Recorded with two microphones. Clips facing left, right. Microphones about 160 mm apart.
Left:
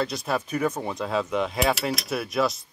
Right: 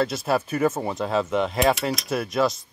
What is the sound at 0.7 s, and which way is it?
Speech, 25° right (ahead or behind).